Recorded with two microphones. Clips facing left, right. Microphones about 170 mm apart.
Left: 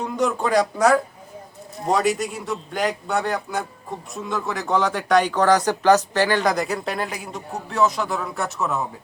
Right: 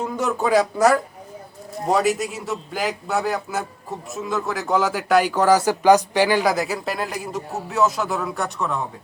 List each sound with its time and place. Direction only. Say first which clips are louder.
0.0 s speech: even; 5° right (ahead or behind)